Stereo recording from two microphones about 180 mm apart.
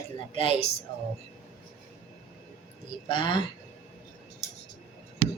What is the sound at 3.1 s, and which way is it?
Speech, 25° left (ahead or behind).